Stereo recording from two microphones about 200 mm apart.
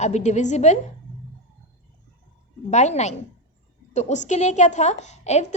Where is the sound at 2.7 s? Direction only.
35° left (ahead or behind).